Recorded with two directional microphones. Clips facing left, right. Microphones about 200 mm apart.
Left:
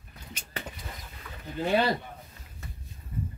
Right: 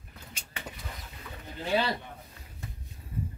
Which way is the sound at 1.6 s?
50° left (ahead or behind).